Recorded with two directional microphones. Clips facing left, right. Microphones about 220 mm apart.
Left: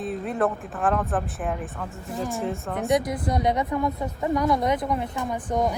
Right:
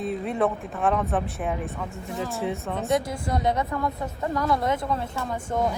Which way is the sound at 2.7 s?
15° left (ahead or behind).